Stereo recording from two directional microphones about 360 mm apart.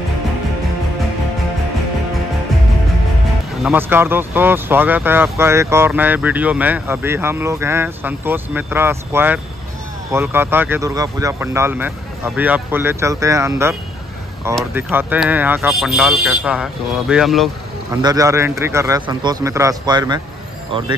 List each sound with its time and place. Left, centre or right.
3.6 s speech: centre